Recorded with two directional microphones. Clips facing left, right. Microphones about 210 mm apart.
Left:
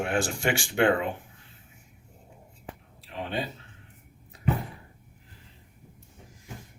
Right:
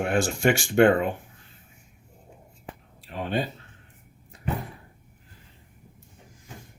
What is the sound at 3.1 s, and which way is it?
Speech, 45° right (ahead or behind).